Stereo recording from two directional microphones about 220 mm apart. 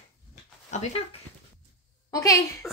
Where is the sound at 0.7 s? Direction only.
35° left (ahead or behind).